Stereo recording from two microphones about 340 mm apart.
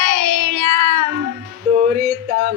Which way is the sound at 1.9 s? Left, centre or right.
Right.